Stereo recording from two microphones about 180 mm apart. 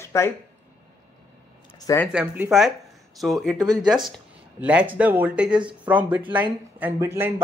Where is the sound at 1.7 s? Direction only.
20° left (ahead or behind).